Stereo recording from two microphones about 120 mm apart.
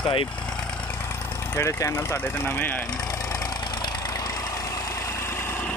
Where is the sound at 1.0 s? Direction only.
20° left (ahead or behind).